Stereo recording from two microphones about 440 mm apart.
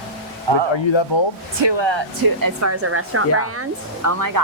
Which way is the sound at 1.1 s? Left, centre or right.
Left.